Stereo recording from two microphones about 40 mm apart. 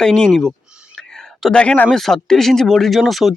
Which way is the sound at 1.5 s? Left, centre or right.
Left.